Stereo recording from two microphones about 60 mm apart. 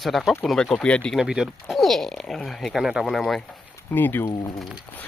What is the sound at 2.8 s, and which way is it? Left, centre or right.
Speech, centre.